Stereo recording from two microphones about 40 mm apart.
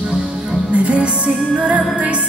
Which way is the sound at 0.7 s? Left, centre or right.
Right.